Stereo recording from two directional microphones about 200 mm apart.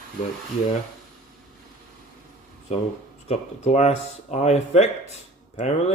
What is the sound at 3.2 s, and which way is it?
Speech, 35° left (ahead or behind).